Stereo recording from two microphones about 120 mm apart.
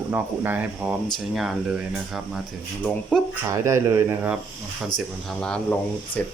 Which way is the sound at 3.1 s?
10° left (ahead or behind).